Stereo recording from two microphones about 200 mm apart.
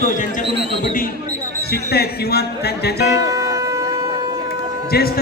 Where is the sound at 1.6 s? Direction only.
55° left (ahead or behind).